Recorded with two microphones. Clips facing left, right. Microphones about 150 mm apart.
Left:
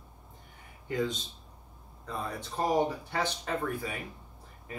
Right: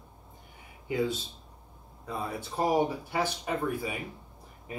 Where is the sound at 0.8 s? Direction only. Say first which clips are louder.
Right 2 dB; 10° right (ahead or behind).